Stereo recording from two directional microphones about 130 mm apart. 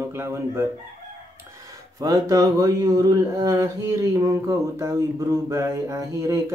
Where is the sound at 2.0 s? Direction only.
30° right (ahead or behind).